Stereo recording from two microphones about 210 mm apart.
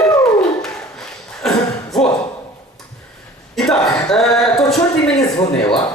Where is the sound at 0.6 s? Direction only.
Centre (ahead or behind).